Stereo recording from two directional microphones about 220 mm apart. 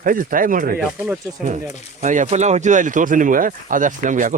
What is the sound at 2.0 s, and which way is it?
Speech, 35° right (ahead or behind).